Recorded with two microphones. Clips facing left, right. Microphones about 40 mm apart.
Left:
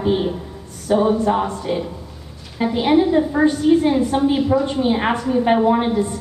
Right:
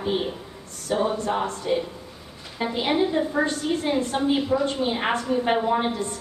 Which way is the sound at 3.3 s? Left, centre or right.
Centre.